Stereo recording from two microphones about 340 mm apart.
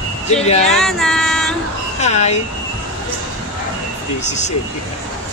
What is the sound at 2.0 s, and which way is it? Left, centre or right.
Speech, centre.